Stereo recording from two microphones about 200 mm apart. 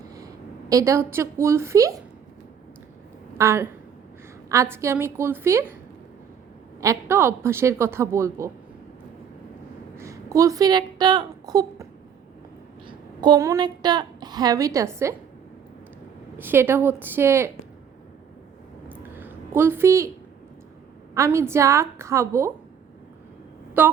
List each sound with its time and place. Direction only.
0.7 s a woman's voice: 15° right (ahead or behind)
3.3 s a woman's voice: 15° right (ahead or behind)
6.8 s a woman's voice: 10° right (ahead or behind)
10.0 s a woman's voice: 15° right (ahead or behind)
12.9 s a woman's voice: 20° right (ahead or behind)
16.4 s a woman's voice: 10° right (ahead or behind)
18.9 s a sound: 10° right (ahead or behind)
21.2 s a woman's voice: 15° right (ahead or behind)
23.8 s a woman's voice: 10° right (ahead or behind)